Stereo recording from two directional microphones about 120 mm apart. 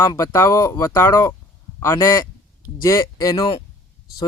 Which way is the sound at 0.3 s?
25° left (ahead or behind).